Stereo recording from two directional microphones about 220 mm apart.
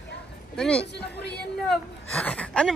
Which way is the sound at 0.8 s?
50° left (ahead or behind).